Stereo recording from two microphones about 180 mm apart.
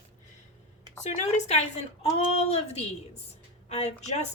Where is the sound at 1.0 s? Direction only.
40° left (ahead or behind).